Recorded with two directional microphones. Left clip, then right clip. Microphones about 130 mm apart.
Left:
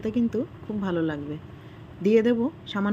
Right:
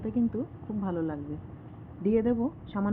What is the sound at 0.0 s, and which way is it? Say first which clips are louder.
Speech: left 4 dB; 25° left (ahead or behind).